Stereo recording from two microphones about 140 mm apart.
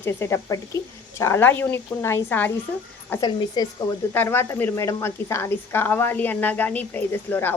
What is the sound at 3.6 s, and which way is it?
Speech, 30° left (ahead or behind).